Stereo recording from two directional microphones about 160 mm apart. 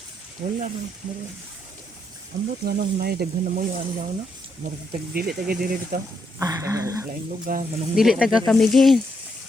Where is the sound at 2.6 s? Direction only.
75° right (ahead or behind).